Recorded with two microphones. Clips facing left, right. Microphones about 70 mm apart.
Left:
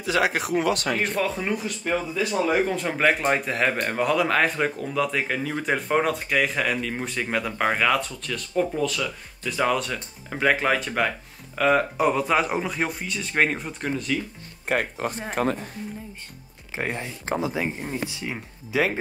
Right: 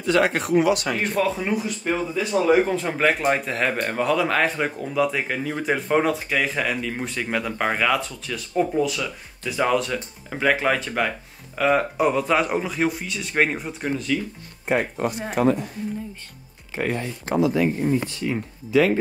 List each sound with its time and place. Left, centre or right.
0.0 s speech: centre
14.7 s speech: right
15.4 s a woman's voice: left
16.7 s speech: centre
18.1 s speech: centre